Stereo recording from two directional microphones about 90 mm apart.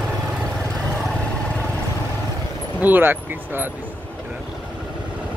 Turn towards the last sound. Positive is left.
turn(degrees=-25)  # may be behind; listen again after turning